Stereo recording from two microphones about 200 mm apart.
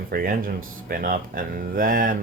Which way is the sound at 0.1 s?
45° right (ahead or behind).